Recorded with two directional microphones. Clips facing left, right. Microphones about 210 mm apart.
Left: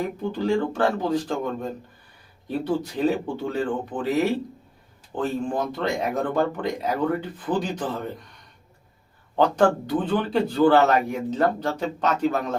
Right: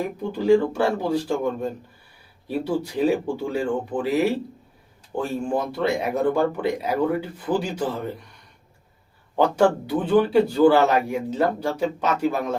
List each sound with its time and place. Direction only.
0.3 s speech: 10° right (ahead or behind)
9.3 s speech: 10° right (ahead or behind)